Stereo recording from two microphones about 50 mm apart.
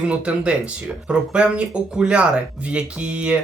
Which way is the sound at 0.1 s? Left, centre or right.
Right.